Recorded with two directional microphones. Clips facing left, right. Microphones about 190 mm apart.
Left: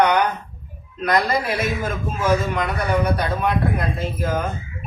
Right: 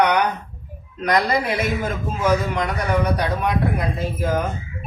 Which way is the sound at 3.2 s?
15° right (ahead or behind).